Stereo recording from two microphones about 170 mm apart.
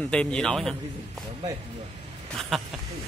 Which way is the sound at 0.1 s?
5° left (ahead or behind).